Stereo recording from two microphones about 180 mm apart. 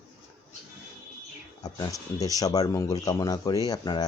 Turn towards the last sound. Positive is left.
turn(degrees=20)  # may be behind; listen again after turning